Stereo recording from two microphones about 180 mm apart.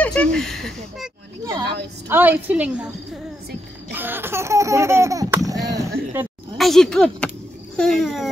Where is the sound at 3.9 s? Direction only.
10° right (ahead or behind).